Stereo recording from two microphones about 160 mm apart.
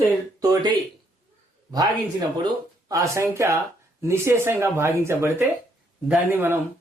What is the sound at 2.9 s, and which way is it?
Speech, 20° right (ahead or behind).